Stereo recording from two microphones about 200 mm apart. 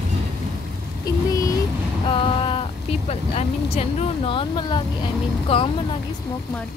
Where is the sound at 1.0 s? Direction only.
15° left (ahead or behind).